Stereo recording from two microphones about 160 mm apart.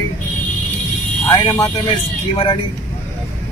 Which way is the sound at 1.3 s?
20° left (ahead or behind).